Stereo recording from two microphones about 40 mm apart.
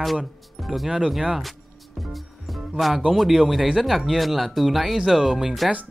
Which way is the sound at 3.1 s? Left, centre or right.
Centre.